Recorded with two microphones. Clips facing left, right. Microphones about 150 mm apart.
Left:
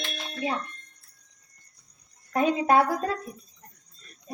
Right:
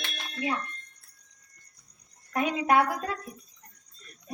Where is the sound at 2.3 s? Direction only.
30° left (ahead or behind).